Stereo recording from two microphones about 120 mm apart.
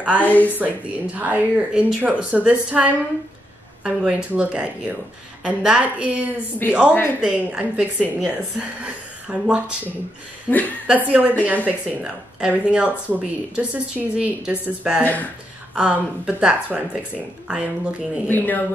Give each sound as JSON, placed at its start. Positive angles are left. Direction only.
{"t": 0.2, "sound": "speech", "side_deg": 15}
{"t": 0.6, "sound": "speech", "side_deg": -15}
{"t": 6.9, "sound": "speech", "side_deg": 15}
{"t": 7.2, "sound": "speech", "side_deg": -10}
{"t": 10.5, "sound": "speech", "side_deg": 15}
{"t": 10.9, "sound": "speech", "side_deg": -10}
{"t": 18.3, "sound": "speech", "side_deg": 15}